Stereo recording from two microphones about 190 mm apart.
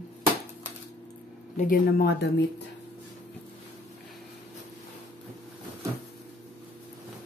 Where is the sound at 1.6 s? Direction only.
50° left (ahead or behind).